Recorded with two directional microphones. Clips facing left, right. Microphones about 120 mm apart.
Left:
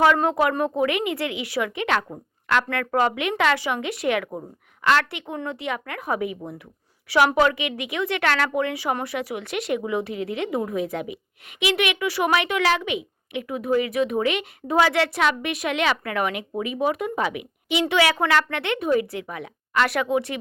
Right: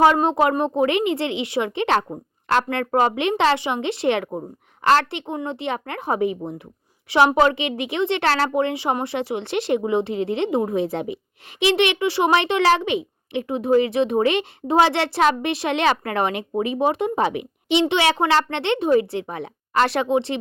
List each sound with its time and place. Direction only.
0.2 s speech: 25° right (ahead or behind)
5.2 s speech: 25° right (ahead or behind)